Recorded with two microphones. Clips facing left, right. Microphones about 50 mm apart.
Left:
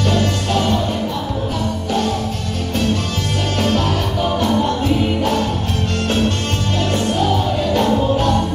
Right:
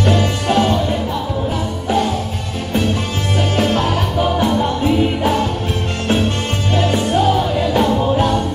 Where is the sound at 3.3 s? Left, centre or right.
Centre.